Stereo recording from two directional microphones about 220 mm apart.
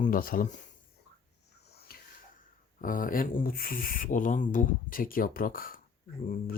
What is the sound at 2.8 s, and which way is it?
Speech, 40° left (ahead or behind).